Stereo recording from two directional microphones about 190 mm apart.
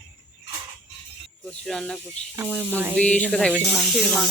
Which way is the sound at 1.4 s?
Centre (ahead or behind).